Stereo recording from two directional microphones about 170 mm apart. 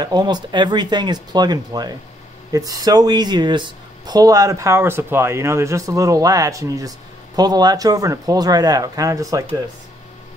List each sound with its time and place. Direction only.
0.0 s speech: 25° right (ahead or behind)